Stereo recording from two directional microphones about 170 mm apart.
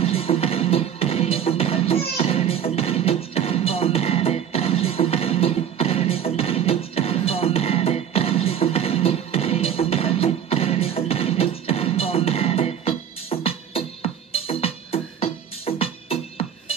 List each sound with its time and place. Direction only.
0.0 s music: 35° left (ahead or behind)